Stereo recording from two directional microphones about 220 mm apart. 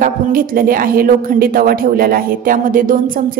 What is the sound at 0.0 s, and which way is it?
Speech, 40° right (ahead or behind).